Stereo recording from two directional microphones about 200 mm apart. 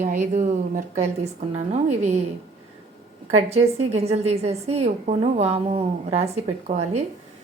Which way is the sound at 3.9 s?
30° right (ahead or behind).